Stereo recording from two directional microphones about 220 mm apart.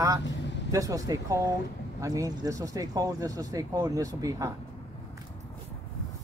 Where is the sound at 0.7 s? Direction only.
15° right (ahead or behind).